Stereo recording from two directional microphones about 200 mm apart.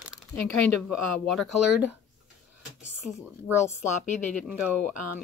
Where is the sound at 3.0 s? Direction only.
Centre (ahead or behind).